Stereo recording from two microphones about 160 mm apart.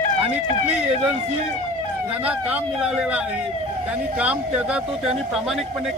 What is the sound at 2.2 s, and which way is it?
Speech, 10° right (ahead or behind).